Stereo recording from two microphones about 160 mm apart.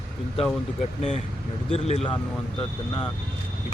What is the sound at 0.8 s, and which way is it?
Speech, 45° left (ahead or behind).